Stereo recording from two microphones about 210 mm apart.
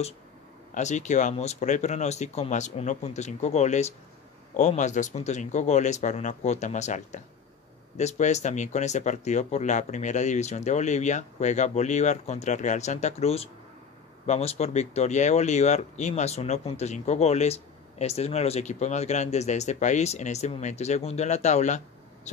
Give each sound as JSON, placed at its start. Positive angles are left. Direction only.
{"t": 0.7, "sound": "speech", "side_deg": 35}